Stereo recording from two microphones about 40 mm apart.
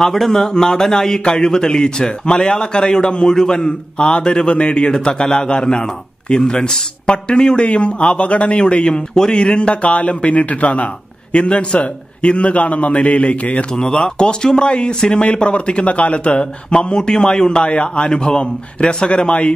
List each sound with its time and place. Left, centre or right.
0.0 s a man's voice: centre; by 13.7 s left
13.7 s a man's voice: centre